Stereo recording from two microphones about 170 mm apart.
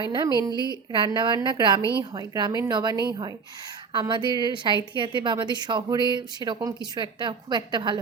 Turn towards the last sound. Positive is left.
turn(degrees=-25)  # may be behind; listen again after turning